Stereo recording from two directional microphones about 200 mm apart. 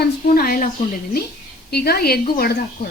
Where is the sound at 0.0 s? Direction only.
50° left (ahead or behind).